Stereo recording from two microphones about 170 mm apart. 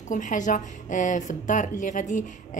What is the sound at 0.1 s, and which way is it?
A woman's voice, 50° left (ahead or behind).